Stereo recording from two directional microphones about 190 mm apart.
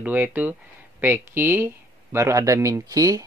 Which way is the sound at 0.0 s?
10° right (ahead or behind).